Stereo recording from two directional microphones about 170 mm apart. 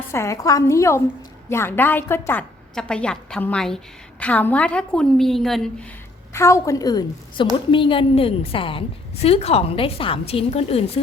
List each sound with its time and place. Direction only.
0.1 s a woman's voice: 15° left (ahead or behind)
6.3 s a woman's voice: 15° left (ahead or behind); by 11.0 s 35° left (ahead or behind)